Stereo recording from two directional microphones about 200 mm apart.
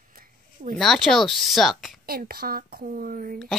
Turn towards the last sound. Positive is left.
turn(degrees=-45)  # may be behind; listen again after turning